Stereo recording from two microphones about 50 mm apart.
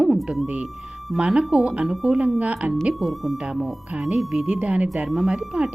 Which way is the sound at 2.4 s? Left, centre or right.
Right.